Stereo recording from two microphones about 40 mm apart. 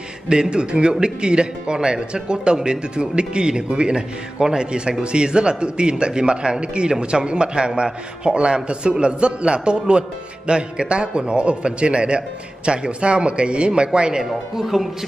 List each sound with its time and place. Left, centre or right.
0.3 s a man's voice: right
14.2 s speech: centre